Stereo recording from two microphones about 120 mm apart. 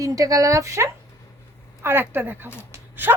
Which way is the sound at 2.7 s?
15° right (ahead or behind).